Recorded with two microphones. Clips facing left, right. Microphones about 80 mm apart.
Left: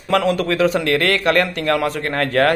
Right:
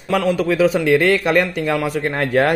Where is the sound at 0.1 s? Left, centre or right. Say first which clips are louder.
Even; centre.